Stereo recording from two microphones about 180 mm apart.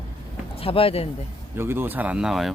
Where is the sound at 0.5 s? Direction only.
30° left (ahead or behind).